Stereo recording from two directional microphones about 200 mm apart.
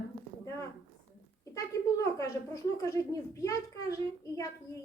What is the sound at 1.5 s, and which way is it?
A woman's voice, 15° left (ahead or behind).